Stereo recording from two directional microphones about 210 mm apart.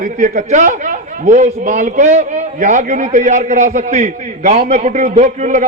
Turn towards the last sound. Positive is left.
turn(degrees=-40)  # may be behind; listen again after turning